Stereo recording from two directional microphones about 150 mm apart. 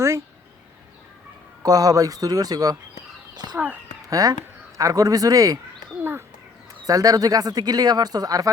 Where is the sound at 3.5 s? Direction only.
10° right (ahead or behind).